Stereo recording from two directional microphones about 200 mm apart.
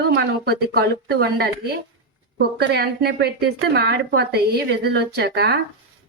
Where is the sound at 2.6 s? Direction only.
55° right (ahead or behind).